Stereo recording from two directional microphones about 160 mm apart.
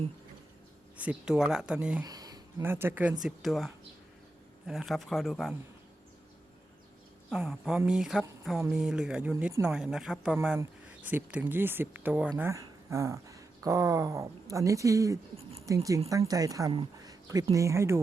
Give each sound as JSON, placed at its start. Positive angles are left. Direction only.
{"t": 0.9, "sound": "speech", "side_deg": -5}
{"t": 2.0, "sound": "speech", "side_deg": -25}
{"t": 7.3, "sound": "speech", "side_deg": 0}
{"t": 17.0, "sound": "a sound", "side_deg": -25}
{"t": 17.5, "sound": "speech", "side_deg": -20}